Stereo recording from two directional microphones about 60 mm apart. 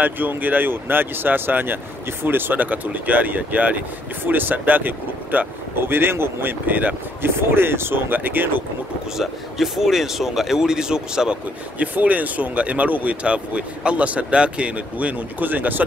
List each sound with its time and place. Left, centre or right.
0.0 s speech: right
7.2 s speech: right
9.1 s speech: centre
11.8 s speech: right